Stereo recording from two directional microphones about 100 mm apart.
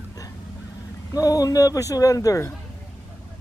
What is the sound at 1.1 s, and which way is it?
Speech, 40° left (ahead or behind).